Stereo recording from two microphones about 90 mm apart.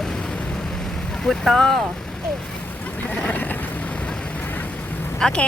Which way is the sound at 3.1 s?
15° left (ahead or behind).